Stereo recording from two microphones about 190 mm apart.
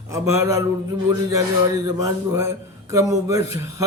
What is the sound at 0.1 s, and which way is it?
Speech, 15° right (ahead or behind).